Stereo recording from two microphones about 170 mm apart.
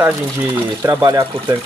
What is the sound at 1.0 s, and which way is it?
Speech, 20° right (ahead or behind).